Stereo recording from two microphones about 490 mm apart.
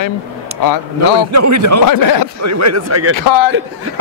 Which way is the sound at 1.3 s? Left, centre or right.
Right.